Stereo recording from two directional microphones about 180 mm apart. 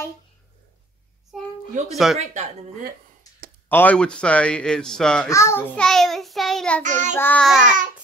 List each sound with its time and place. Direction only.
2.0 s speech: centre (ahead or behind)
3.6 s speech: 10° left (ahead or behind)
5.3 s speech: 15° left (ahead or behind)
6.8 s child singing: 40° right (ahead or behind)
7.2 s speech: 10° left (ahead or behind)